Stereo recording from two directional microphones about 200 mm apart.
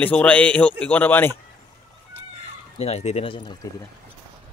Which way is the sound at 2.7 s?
30° left (ahead or behind).